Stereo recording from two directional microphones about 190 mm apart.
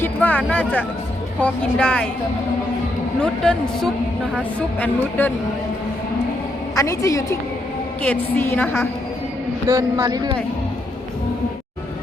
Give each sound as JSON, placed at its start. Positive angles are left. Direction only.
{"t": 0.0, "sound": "speech", "side_deg": 10}
{"t": 3.2, "sound": "a woman's voice", "side_deg": 5}
{"t": 6.7, "sound": "a woman's voice", "side_deg": 15}
{"t": 9.6, "sound": "speech", "side_deg": -15}